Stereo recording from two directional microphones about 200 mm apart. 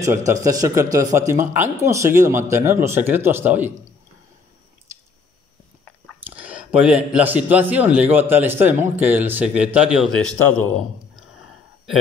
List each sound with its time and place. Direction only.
0.3 s speech: 15° right (ahead or behind)
6.3 s a sound: 5° right (ahead or behind)
7.2 s a man's voice: 5° right (ahead or behind)